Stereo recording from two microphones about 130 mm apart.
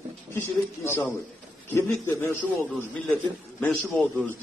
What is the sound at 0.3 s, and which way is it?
A man's voice, 20° left (ahead or behind).